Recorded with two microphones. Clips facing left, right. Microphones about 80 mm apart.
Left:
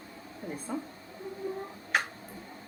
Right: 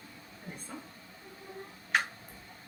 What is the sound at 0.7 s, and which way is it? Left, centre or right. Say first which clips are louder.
Speech: left 11 dB; centre.